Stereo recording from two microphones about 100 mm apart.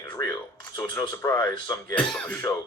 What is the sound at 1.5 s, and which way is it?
Speech, 45° left (ahead or behind).